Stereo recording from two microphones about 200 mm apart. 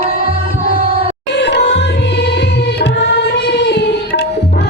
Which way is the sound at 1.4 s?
55° left (ahead or behind).